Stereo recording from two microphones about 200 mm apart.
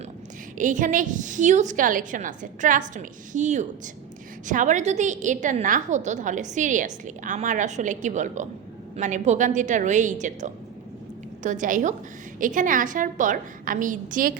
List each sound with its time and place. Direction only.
0.6 s a woman's voice: 40° right (ahead or behind)